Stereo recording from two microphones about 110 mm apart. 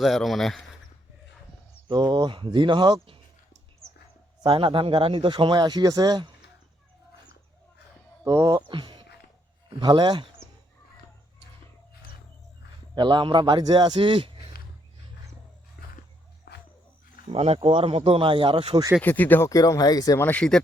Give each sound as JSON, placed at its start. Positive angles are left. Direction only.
{"t": 0.0, "sound": "speech", "side_deg": 0}
{"t": 1.9, "sound": "speech", "side_deg": -40}
{"t": 4.4, "sound": "speech", "side_deg": -50}
{"t": 8.2, "sound": "speech", "side_deg": -30}
{"t": 8.6, "sound": "a sound", "side_deg": -45}
{"t": 9.6, "sound": "speech", "side_deg": -45}
{"t": 12.9, "sound": "speech", "side_deg": -45}
{"t": 17.3, "sound": "speech", "side_deg": -65}
{"t": 19.0, "sound": "speech", "side_deg": 15}
{"t": 19.5, "sound": "speech", "side_deg": 30}
{"t": 20.1, "sound": "speech", "side_deg": 15}